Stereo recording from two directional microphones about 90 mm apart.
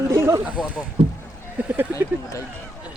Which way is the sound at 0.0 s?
35° right (ahead or behind).